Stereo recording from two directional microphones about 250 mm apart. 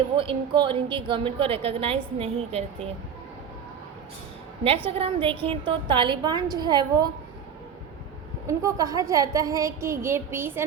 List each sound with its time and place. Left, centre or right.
0.2 s a woman's voice: centre
4.9 s a woman's voice: right
8.4 s a woman's voice: centre